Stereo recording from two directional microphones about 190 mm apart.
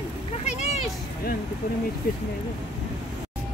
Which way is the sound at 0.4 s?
35° left (ahead or behind).